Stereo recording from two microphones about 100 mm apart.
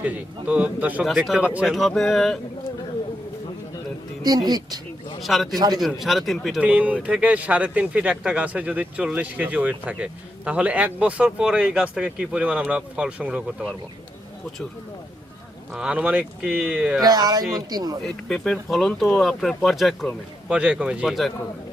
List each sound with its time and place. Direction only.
0.0 s speech: 15° right (ahead or behind)
1.0 s speech: 5° right (ahead or behind)
1.6 s speech: centre (ahead or behind)
4.4 s speech: 40° right (ahead or behind)
5.2 s speech: centre (ahead or behind)
5.5 s speech: 40° right (ahead or behind)
5.8 s speech: centre (ahead or behind)
6.6 s speech: 15° right (ahead or behind)
15.7 s speech: 10° right (ahead or behind)
17.0 s speech: 40° right (ahead or behind)
18.0 s speech: 5° left (ahead or behind)